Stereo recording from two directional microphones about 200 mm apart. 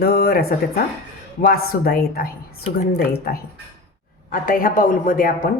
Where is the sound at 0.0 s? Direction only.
50° left (ahead or behind).